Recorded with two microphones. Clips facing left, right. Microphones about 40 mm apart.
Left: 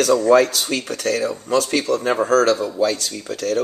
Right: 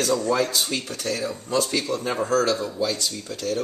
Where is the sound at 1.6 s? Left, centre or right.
Left.